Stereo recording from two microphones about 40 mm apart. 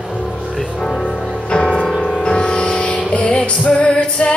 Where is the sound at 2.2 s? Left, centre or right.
Left.